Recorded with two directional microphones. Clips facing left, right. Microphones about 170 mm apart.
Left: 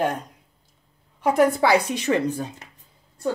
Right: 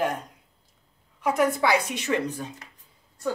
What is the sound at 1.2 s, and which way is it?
Speech, 35° left (ahead or behind).